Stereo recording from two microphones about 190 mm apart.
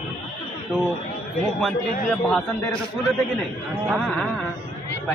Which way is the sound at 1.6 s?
Centre (ahead or behind).